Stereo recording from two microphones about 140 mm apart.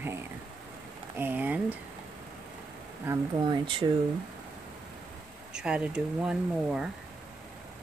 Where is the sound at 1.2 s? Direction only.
10° right (ahead or behind).